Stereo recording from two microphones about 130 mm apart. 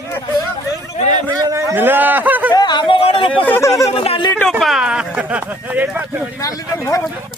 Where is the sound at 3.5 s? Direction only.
20° left (ahead or behind).